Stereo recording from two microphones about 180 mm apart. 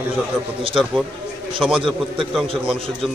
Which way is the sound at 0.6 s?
30° right (ahead or behind).